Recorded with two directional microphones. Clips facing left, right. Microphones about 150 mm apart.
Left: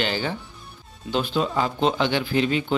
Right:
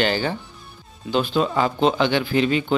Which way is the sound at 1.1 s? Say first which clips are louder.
Right 3 dB; 70° right (ahead or behind).